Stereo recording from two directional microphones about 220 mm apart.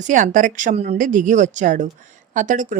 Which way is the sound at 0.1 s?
35° right (ahead or behind).